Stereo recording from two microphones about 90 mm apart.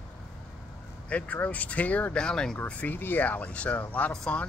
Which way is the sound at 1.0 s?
15° left (ahead or behind).